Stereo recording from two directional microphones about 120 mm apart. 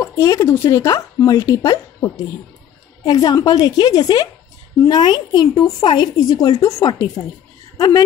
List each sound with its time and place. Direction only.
0.1 s a woman's voice: 25° left (ahead or behind)